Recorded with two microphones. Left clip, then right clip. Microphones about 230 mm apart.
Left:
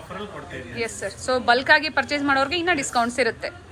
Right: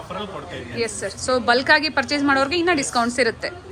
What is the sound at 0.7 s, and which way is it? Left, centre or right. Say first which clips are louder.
A woman's voice: right 3 dB; centre.